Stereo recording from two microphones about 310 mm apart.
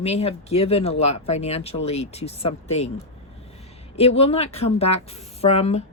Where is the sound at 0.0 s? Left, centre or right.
Centre.